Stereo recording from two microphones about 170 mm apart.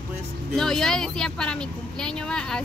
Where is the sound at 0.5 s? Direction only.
5° left (ahead or behind).